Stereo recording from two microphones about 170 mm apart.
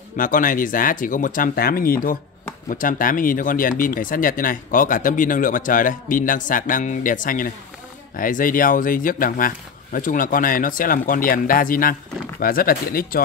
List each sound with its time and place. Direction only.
0.2 s speech: 50° left (ahead or behind)